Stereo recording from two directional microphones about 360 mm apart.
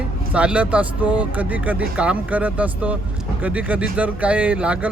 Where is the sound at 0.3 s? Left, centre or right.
Centre.